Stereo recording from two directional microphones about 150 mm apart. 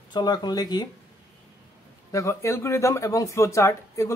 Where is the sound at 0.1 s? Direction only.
30° left (ahead or behind).